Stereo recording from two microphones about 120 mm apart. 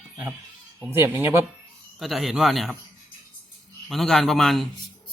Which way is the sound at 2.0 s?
Centre (ahead or behind).